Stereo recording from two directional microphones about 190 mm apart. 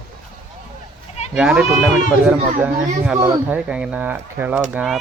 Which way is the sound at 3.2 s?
15° right (ahead or behind).